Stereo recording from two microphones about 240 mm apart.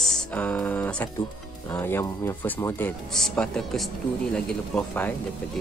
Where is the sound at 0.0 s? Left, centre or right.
Centre.